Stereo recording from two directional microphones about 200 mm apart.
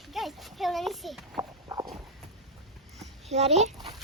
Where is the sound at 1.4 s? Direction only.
20° right (ahead or behind).